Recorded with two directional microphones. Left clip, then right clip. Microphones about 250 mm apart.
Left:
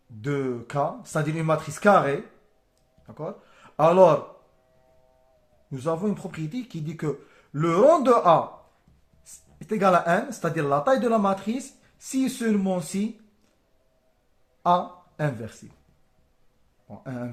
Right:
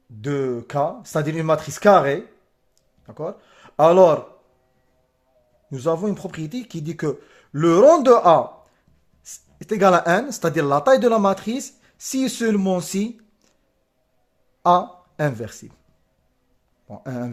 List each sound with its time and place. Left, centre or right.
0.2 s speech: right
5.7 s speech: right
14.6 s speech: right
16.9 s speech: right